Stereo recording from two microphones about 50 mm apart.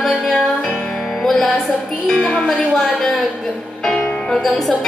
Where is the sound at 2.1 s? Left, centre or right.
Left.